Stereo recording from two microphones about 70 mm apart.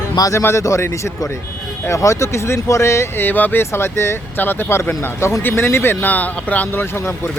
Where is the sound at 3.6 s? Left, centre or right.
Left.